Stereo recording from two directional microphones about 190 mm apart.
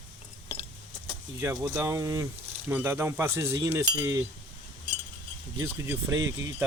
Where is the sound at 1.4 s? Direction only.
15° right (ahead or behind).